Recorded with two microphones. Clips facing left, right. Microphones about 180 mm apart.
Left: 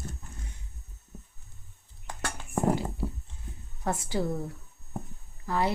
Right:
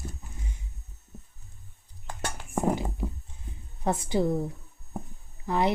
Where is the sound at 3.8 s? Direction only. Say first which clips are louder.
Right 4 dB; 20° right (ahead or behind).